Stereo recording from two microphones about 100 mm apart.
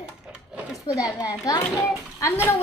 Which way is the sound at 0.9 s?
40° left (ahead or behind).